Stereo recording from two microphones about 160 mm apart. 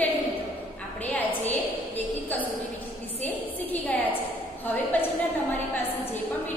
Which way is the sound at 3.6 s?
10° left (ahead or behind).